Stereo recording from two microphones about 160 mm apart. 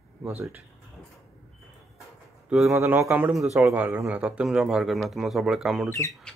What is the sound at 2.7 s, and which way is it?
Speech, 15° right (ahead or behind).